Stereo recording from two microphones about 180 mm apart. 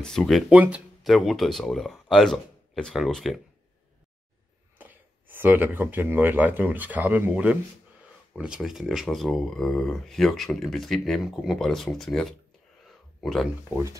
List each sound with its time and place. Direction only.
0.0 s speech: 5° left (ahead or behind)
4.7 s speech: 10° right (ahead or behind)
12.8 s a sound: centre (ahead or behind)